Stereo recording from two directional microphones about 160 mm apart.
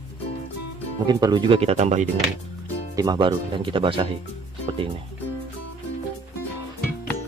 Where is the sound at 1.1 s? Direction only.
25° right (ahead or behind); by 2.1 s 45° right (ahead or behind).